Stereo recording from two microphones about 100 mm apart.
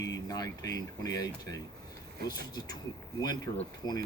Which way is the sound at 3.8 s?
45° left (ahead or behind).